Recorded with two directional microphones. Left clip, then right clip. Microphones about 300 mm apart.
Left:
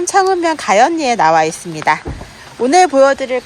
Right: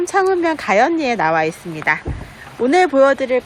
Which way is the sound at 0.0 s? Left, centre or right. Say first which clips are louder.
Left 3 dB; centre.